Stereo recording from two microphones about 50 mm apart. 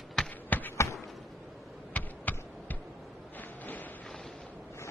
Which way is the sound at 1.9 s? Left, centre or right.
Left.